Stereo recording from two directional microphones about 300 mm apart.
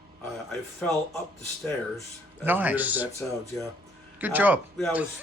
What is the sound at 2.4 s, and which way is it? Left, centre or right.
Speech, centre.